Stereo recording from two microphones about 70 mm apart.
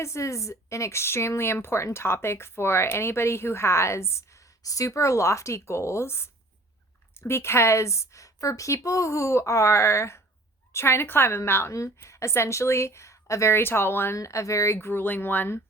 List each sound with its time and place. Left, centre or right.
0.0 s speech: left
4.6 s a woman's voice: left
14.2 s speech: left